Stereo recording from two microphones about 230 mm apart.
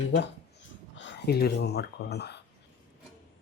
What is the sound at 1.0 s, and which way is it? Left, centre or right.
Speech, left.